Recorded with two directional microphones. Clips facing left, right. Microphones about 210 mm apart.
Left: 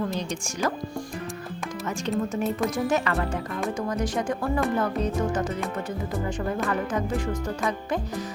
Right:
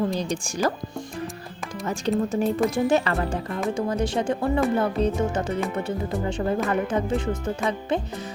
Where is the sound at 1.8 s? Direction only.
35° right (ahead or behind).